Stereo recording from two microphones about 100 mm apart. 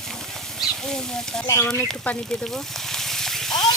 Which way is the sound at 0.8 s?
5° left (ahead or behind).